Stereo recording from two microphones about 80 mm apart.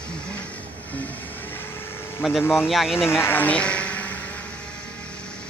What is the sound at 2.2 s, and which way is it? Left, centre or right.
Speech, centre.